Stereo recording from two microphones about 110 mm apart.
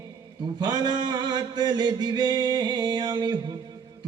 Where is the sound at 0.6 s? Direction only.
40° right (ahead or behind).